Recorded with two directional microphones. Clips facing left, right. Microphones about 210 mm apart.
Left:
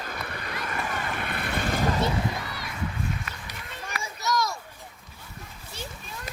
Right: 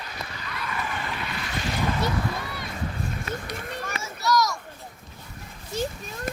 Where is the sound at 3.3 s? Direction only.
50° right (ahead or behind).